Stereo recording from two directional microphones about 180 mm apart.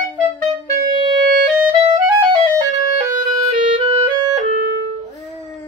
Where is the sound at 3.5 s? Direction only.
30° right (ahead or behind).